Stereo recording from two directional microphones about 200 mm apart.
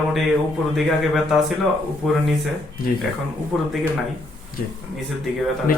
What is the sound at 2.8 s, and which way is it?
Speech, 45° left (ahead or behind).